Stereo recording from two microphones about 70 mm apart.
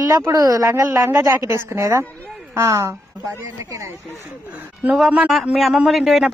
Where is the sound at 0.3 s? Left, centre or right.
Right.